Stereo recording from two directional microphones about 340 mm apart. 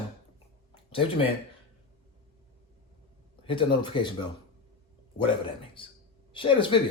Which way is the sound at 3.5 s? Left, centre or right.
Centre.